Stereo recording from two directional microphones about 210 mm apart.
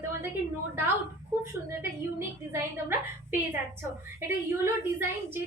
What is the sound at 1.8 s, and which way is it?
Speech, 10° right (ahead or behind).